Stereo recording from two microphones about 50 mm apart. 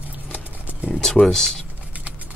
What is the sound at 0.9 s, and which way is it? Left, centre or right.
Speech, centre.